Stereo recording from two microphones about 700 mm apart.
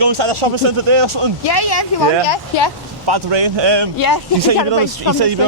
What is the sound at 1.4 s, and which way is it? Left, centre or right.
Speech, left.